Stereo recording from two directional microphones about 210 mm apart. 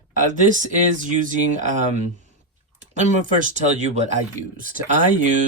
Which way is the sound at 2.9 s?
35° right (ahead or behind).